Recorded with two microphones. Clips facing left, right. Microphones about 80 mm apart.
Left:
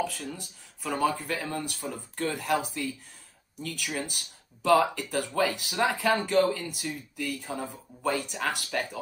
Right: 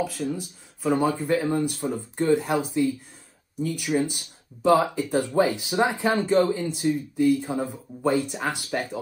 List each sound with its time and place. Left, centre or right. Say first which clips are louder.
0.0 s speech: right 5 dB; centre
0.8 s speech: right 5 dB; centre